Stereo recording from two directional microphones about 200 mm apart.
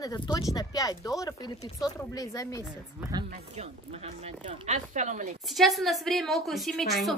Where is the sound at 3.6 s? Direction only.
30° right (ahead or behind).